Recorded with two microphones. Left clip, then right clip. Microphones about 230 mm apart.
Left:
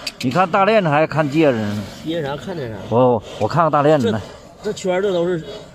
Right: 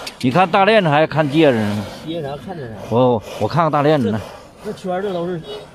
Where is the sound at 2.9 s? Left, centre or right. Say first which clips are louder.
Even; centre.